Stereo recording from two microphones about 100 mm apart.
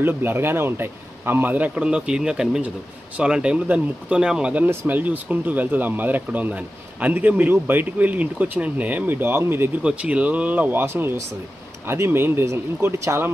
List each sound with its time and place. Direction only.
0.0 s speech: 20° right (ahead or behind)
9.8 s speech: 10° right (ahead or behind)